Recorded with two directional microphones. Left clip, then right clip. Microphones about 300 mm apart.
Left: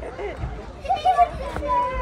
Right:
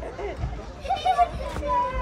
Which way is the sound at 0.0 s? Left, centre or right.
Right.